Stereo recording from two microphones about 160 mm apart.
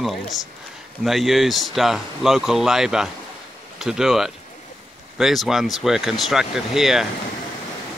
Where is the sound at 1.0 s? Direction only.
Centre (ahead or behind).